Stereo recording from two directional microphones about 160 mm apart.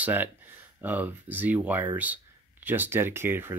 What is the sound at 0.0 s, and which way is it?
Speech, 10° right (ahead or behind).